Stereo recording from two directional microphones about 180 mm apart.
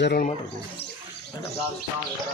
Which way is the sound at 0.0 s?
60° left (ahead or behind).